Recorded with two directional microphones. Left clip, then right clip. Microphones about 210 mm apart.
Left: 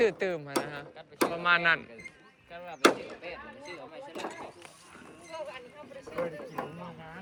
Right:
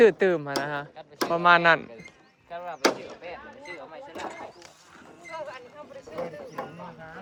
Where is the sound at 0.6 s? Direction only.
40° right (ahead or behind).